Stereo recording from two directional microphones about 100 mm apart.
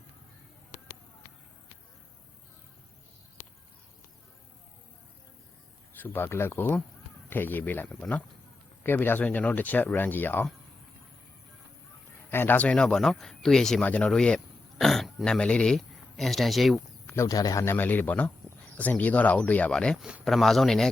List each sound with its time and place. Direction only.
6.0 s speech: 20° left (ahead or behind)
12.3 s speech: 20° left (ahead or behind); by 16.8 s centre (ahead or behind)
17.2 s speech: 40° left (ahead or behind); by 20.0 s 10° left (ahead or behind)
20.0 s a man's voice: 10° right (ahead or behind)
20.2 s speech: centre (ahead or behind)